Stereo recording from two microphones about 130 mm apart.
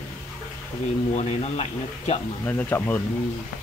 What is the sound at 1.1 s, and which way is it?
Speech, 60° left (ahead or behind).